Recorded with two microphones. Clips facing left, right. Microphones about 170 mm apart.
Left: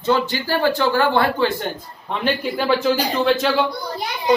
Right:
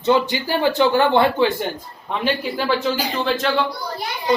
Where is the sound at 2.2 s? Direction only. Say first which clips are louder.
Left 1 dB; centre (ahead or behind).